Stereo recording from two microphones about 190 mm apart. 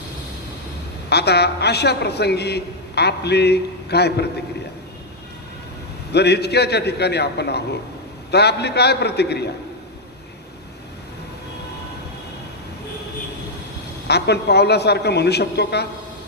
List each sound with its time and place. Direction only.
1.1 s a man's voice: 60° left (ahead or behind)
6.1 s a man's voice: 60° left (ahead or behind)
14.1 s a man's voice: 60° left (ahead or behind)